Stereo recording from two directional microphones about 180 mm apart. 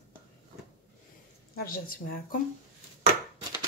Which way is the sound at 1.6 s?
50° left (ahead or behind).